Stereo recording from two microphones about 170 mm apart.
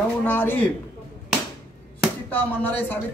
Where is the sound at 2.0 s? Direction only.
10° left (ahead or behind).